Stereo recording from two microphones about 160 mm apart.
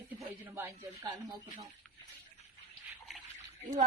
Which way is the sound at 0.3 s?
15° right (ahead or behind).